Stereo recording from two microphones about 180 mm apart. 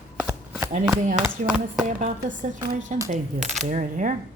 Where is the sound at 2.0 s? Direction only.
45° right (ahead or behind).